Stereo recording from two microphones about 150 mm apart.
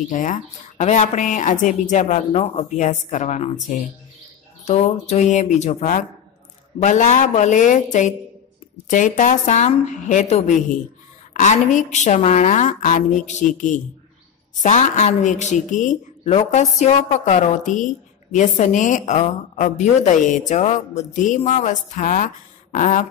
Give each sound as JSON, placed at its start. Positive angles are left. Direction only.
{"t": 0.1, "sound": "a woman's voice", "side_deg": 60}
{"t": 16.3, "sound": "a woman's voice", "side_deg": 45}